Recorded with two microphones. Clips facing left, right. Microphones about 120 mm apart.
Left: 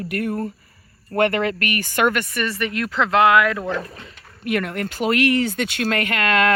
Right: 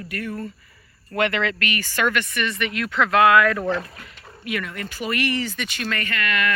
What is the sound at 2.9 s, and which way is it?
Speech, 25° left (ahead or behind).